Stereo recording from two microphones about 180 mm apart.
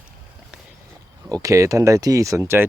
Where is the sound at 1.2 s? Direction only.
20° right (ahead or behind).